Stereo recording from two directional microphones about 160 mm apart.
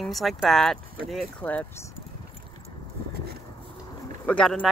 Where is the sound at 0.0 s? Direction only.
Centre (ahead or behind).